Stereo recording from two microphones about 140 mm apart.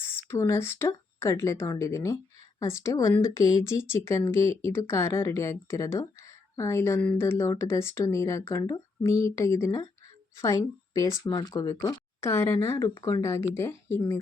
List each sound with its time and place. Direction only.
0.0 s speech: 15° left (ahead or behind)